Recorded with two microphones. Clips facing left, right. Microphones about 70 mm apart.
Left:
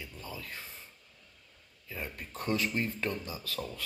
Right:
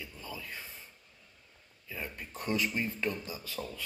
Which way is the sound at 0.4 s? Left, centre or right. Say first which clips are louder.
Even; right.